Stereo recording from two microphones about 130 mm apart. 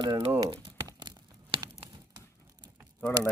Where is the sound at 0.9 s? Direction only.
35° right (ahead or behind).